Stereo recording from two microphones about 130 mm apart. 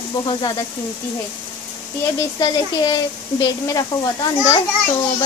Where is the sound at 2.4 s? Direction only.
30° left (ahead or behind).